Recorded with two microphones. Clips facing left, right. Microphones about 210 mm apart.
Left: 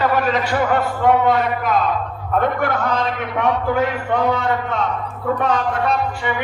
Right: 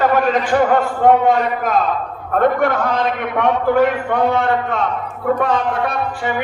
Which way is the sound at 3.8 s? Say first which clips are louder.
Right 3 dB; 55° right (ahead or behind).